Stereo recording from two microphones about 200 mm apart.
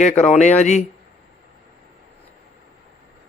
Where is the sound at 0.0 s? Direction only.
35° left (ahead or behind).